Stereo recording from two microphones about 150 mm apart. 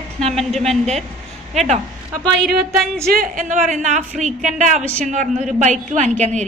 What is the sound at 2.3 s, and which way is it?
Speech, centre (ahead or behind).